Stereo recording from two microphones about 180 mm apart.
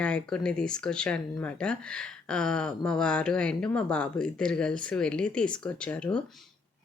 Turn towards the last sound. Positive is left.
turn(degrees=5)  # may be behind; listen again after turning